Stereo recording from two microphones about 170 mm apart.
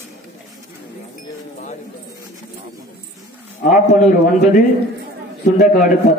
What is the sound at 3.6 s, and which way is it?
A man's voice, 55° left (ahead or behind).